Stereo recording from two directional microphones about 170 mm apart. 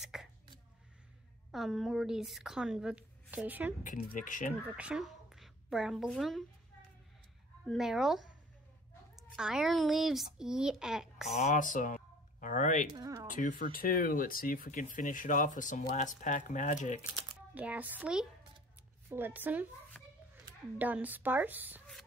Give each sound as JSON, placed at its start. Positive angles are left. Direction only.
{"t": 0.0, "sound": "a sound", "side_deg": -5}
{"t": 1.5, "sound": "a woman's voice", "side_deg": 0}
{"t": 3.8, "sound": "speech", "side_deg": 50}
{"t": 4.7, "sound": "a woman's voice", "side_deg": -5}
{"t": 7.6, "sound": "a woman's voice", "side_deg": 0}
{"t": 11.3, "sound": "speech", "side_deg": 45}
{"t": 12.9, "sound": "speech", "side_deg": -20}
{"t": 13.3, "sound": "speech", "side_deg": 50}
{"t": 17.6, "sound": "a woman's voice", "side_deg": -10}
{"t": 20.7, "sound": "a woman's voice", "side_deg": -10}